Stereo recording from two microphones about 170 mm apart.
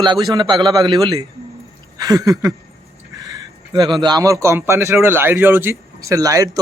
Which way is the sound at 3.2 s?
25° right (ahead or behind).